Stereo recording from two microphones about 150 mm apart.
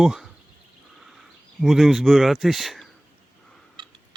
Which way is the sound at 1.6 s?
Centre (ahead or behind).